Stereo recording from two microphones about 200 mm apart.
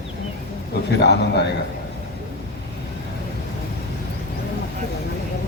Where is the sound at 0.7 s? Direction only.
55° left (ahead or behind).